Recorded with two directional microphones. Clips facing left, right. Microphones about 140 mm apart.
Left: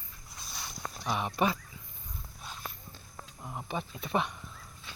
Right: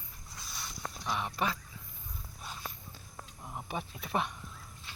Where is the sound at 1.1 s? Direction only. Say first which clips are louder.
Left 4 dB; 20° left (ahead or behind).